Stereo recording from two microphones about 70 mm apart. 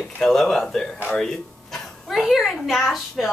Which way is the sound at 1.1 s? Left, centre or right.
Centre.